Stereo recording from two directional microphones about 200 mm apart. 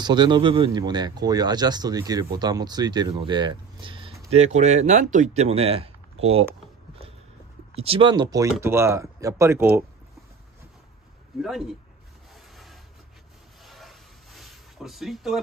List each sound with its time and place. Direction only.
0.0 s speech: 20° right (ahead or behind)
7.7 s speech: 30° right (ahead or behind); by 9.7 s 15° right (ahead or behind)
11.4 s speech: centre (ahead or behind)
13.7 s a sound: centre (ahead or behind)